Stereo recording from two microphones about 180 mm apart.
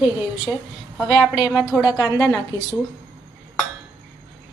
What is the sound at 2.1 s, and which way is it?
Speech, 20° left (ahead or behind).